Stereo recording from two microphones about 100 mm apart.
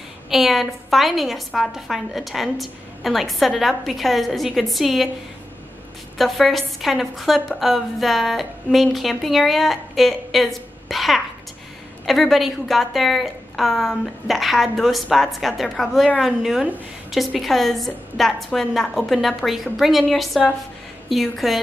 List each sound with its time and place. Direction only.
0.3 s a woman's voice: centre (ahead or behind)
6.1 s a woman's voice: centre (ahead or behind)